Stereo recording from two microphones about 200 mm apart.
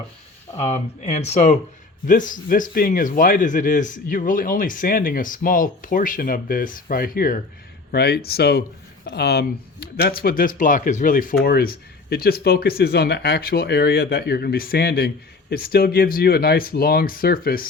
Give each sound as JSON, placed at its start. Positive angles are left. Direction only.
{"t": 0.5, "sound": "speech", "side_deg": 35}